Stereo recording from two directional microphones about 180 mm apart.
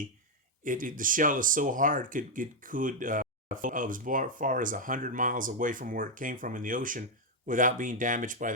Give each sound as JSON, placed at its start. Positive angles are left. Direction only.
{"t": 0.6, "sound": "speech", "side_deg": -50}